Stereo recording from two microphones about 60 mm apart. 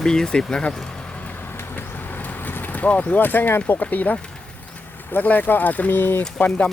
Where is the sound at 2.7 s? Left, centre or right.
Left.